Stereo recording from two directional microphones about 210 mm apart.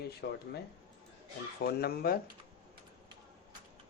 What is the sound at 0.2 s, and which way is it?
Speech, 55° left (ahead or behind).